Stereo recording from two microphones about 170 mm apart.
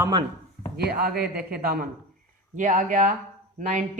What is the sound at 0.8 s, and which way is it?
A man's voice, 70° right (ahead or behind).